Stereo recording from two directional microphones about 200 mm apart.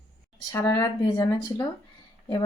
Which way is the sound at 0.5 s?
20° left (ahead or behind).